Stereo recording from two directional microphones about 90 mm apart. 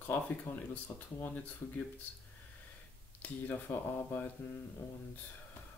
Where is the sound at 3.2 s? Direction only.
20° left (ahead or behind).